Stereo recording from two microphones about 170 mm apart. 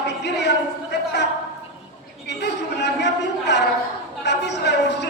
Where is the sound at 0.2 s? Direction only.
90° left.